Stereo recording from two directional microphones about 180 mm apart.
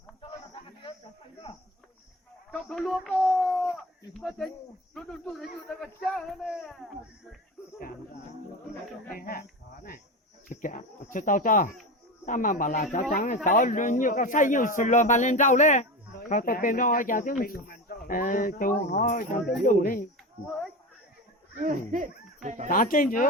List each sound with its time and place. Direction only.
1.5 s a sound: 35° left (ahead or behind)
2.5 s a sound: 5° left (ahead or behind)
4.9 s speech: centre (ahead or behind)
9.0 s speech: 55° left (ahead or behind)
10.5 s speech: 45° left (ahead or behind)
20.4 s speech: centre (ahead or behind)
21.6 s speech: 45° right (ahead or behind)
22.7 s speech: 50° left (ahead or behind)